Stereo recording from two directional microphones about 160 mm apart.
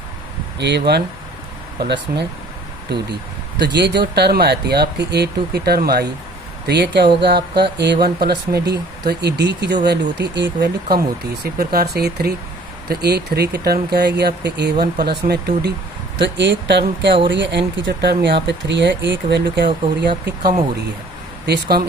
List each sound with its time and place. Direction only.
0.6 s speech: 90° right
3.6 s speech: 90° right
6.7 s speech: 90° right